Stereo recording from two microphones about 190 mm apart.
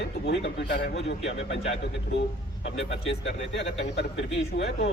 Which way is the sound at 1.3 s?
75° left (ahead or behind).